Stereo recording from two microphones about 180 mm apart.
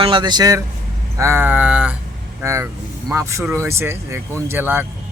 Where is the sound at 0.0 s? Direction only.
25° right (ahead or behind).